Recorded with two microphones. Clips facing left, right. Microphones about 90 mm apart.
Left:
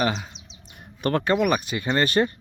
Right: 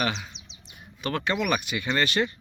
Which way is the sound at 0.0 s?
35° left (ahead or behind).